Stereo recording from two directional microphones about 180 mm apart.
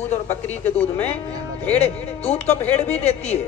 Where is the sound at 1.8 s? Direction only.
35° left (ahead or behind).